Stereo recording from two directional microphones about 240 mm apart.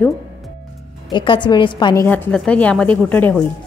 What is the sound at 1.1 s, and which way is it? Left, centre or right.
Speech, centre.